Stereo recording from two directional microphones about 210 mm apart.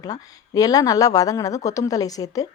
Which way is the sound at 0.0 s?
15° left (ahead or behind).